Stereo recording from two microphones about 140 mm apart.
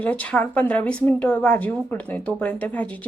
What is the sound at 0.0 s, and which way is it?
Speech, 10° left (ahead or behind).